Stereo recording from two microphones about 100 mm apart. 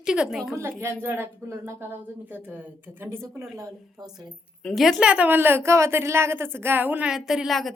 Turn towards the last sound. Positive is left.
turn(degrees=0)  # may be behind; listen again after turning